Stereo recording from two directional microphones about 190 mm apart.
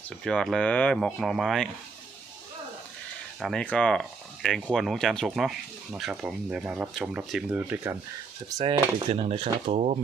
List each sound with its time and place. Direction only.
0.3 s speech: centre (ahead or behind)
3.4 s speech: 5° left (ahead or behind)
8.4 s speech: 25° right (ahead or behind)